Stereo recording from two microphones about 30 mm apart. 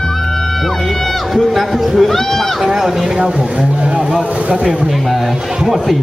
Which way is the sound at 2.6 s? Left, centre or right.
Centre.